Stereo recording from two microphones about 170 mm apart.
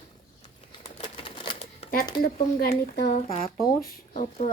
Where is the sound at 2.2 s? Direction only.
65° left (ahead or behind).